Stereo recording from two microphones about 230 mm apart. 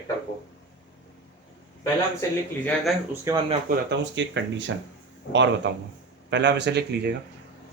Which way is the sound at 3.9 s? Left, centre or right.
Right.